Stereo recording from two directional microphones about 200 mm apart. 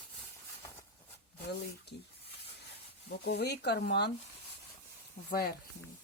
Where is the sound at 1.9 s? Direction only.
55° left (ahead or behind).